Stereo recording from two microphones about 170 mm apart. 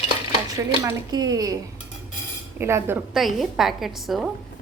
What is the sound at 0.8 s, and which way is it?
Speech, 20° right (ahead or behind).